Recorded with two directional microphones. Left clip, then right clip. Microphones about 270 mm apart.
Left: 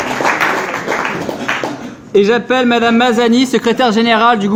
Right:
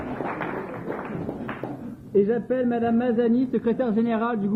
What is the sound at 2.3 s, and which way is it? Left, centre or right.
A man's voice, left.